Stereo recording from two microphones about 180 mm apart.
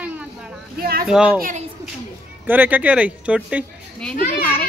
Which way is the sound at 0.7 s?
55° right (ahead or behind).